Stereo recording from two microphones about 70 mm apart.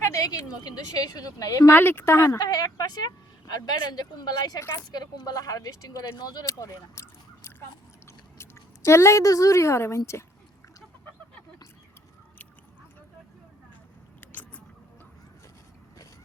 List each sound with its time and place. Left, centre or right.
0.1 s a woman's voice: left
1.7 s speech: left
2.4 s speech: left
4.7 s a woman's voice: left
6.1 s speech: left
6.4 s speech: left
14.2 s a sound: left